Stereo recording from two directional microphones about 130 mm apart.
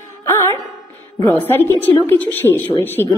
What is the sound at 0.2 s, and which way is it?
Music, 20° left (ahead or behind).